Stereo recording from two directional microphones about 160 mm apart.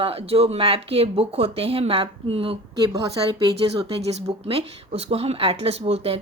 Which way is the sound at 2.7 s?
20° right (ahead or behind).